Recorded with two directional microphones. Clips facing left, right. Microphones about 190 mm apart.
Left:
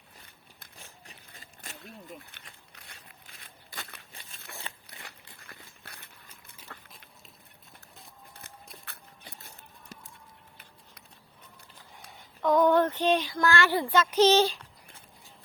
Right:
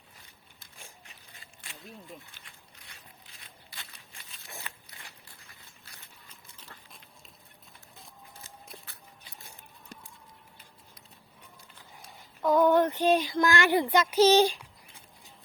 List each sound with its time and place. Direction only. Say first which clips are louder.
1.0 s biting: left 3 dB; 40° left (ahead or behind)
2.4 s speech: left 3 dB; 60° left (ahead or behind)
3.7 s a sound: left 7 dB; 50° left (ahead or behind)
4.7 s crunch: left 2 dB; 25° left (ahead or behind)
5.5 s duck: left 6 dB; 60° left (ahead or behind)
8.8 s a sound: left 3 dB; 60° left (ahead or behind)
9.5 s a sound: even; 10° right (ahead or behind)
12.4 s child singing: even; 10° right (ahead or behind)
13.3 s a child's voice: right 1 dB; 15° right (ahead or behind)